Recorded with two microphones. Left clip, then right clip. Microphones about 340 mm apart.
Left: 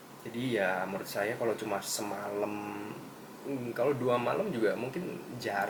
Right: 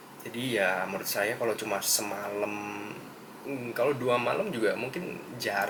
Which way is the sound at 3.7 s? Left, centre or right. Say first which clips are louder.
Right 3 dB; centre.